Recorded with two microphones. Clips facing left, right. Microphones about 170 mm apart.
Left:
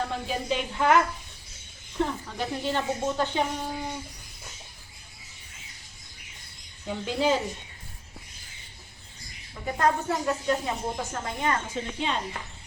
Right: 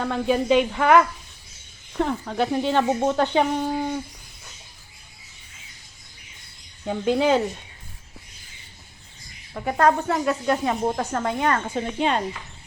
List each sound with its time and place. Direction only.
0.0 s speech: 70° right (ahead or behind)
2.0 s speech: 70° right (ahead or behind)
6.8 s speech: 65° right (ahead or behind)
9.6 s speech: 65° right (ahead or behind)